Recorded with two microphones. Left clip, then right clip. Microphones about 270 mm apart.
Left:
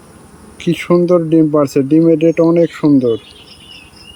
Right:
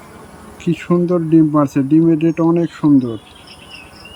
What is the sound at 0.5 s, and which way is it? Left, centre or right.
Speech, centre.